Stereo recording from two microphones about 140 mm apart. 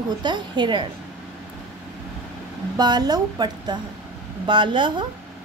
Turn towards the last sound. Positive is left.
turn(degrees=-35)  # may be behind; listen again after turning